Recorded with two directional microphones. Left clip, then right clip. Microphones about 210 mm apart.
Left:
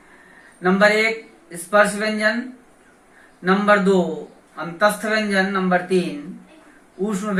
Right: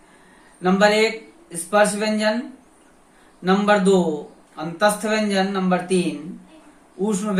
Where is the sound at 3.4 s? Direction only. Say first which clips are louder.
Left 1 dB; 15° right (ahead or behind).